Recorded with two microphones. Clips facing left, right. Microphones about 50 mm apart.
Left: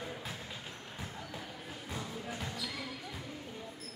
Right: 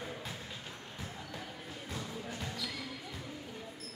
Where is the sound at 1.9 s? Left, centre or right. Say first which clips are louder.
Left 1 dB; centre.